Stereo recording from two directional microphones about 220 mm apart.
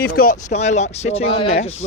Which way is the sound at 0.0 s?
45° left (ahead or behind).